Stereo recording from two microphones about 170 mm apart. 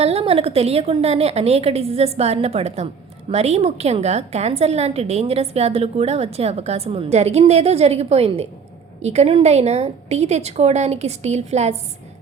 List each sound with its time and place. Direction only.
0.0 s a woman's voice: 35° right (ahead or behind)